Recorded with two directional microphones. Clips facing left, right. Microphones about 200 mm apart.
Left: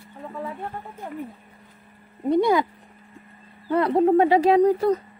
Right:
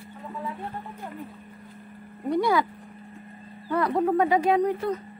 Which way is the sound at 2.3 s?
20° left (ahead or behind).